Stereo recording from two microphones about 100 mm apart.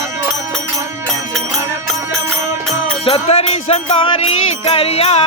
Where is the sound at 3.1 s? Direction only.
85° left.